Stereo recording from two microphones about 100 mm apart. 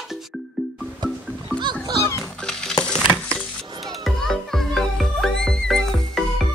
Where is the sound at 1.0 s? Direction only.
45° right (ahead or behind).